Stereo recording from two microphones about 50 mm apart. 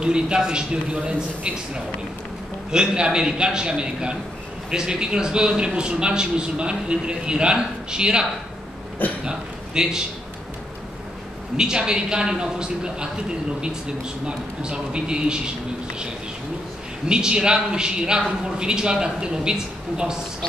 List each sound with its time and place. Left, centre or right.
0.0 s a man's voice: centre
2.7 s a man's voice: centre
11.5 s a man's voice: centre
14.2 s a man's voice: centre
17.1 s a man's voice: centre